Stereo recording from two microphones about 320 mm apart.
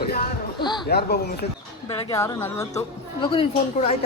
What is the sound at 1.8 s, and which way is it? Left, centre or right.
Speech, centre.